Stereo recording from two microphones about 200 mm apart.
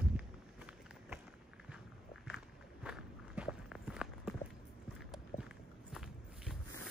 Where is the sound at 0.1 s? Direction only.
5° right (ahead or behind).